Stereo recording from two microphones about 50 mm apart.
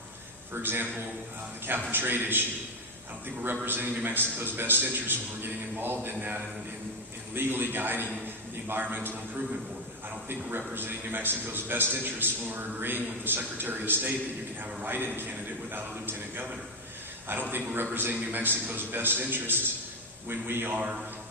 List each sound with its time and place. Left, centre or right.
0.5 s a man's voice: right
3.4 s a man's voice: right
10.8 s a man's voice: right